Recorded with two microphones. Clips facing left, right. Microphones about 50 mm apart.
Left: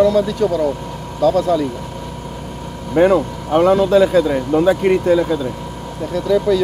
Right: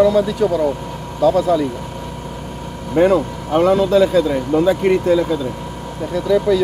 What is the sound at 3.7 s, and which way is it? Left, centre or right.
Speech, left.